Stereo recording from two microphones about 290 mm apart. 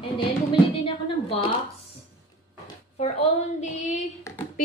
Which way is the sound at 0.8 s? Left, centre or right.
Centre.